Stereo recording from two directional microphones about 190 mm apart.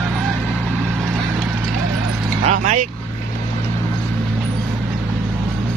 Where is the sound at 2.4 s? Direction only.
40° right (ahead or behind).